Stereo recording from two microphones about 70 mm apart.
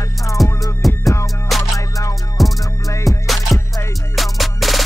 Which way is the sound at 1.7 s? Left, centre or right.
Left.